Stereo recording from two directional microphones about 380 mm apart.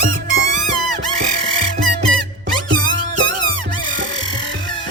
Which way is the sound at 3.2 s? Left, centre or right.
Centre.